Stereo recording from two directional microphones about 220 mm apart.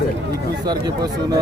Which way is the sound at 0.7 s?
20° right (ahead or behind).